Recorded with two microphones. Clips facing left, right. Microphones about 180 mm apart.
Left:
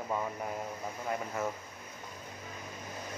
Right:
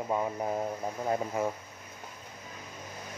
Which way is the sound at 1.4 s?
15° right (ahead or behind).